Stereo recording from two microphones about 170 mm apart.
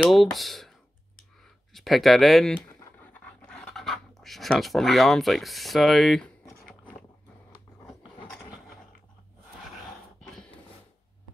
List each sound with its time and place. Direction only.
0.0 s speech: centre (ahead or behind)